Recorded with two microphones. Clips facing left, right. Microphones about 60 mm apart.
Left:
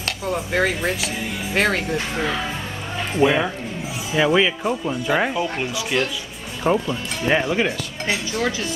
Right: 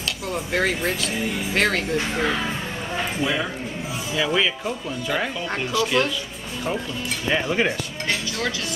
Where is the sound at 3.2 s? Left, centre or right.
Left.